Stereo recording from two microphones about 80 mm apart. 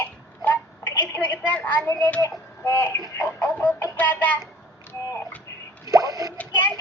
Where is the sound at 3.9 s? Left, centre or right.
Left.